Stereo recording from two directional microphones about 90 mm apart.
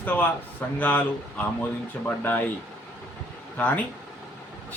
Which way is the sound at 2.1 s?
20° left (ahead or behind).